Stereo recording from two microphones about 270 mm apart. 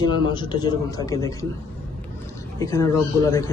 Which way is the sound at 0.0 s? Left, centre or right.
Centre.